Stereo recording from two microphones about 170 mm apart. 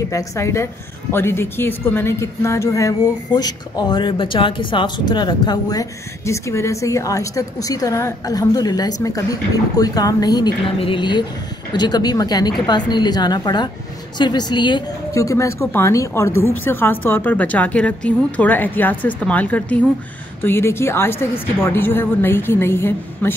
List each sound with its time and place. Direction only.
0.1 s a woman's voice: 15° left (ahead or behind)